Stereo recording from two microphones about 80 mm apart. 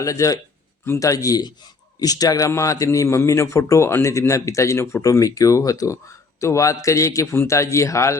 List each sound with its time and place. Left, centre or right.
0.0 s a man's voice: left